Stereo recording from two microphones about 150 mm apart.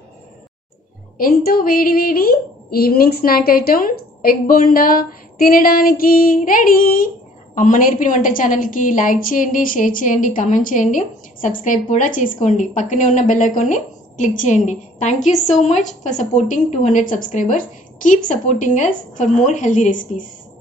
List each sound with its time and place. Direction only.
1.1 s speech: 75° left (ahead or behind)
7.5 s a woman's voice: 60° left (ahead or behind)